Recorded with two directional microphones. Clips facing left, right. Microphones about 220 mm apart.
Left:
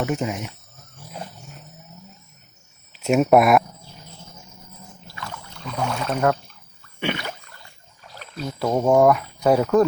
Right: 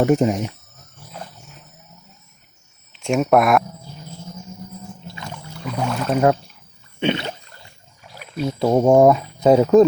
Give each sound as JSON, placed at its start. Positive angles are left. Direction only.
{"t": 0.0, "sound": "speech", "side_deg": -40}
{"t": 2.9, "sound": "speech", "side_deg": 5}
{"t": 5.0, "sound": "rowboat", "side_deg": -20}
{"t": 5.5, "sound": "rowboat", "side_deg": -5}
{"t": 7.0, "sound": "a sound", "side_deg": -25}
{"t": 8.1, "sound": "speech", "side_deg": -15}